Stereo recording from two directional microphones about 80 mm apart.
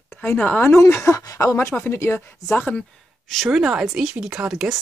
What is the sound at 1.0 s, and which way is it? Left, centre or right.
Speech, left.